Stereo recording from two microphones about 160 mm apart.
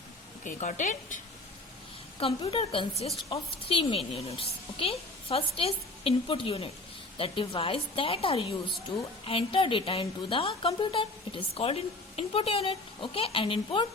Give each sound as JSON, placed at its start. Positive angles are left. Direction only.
{"t": 0.4, "sound": "a woman's voice", "side_deg": 50}
{"t": 2.1, "sound": "a woman's voice", "side_deg": 35}